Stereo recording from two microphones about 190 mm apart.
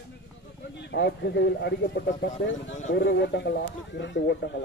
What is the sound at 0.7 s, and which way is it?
Speech, 65° left (ahead or behind).